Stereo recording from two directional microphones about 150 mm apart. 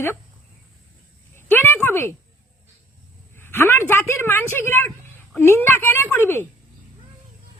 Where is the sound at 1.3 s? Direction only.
15° left (ahead or behind).